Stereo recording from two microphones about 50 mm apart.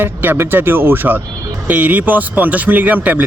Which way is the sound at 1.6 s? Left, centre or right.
Right.